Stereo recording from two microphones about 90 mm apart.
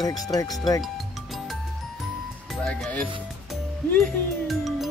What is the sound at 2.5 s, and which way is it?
Speech, 5° left (ahead or behind).